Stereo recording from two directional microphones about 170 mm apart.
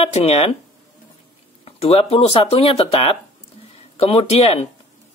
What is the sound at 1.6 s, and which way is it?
Speech, 35° left (ahead or behind).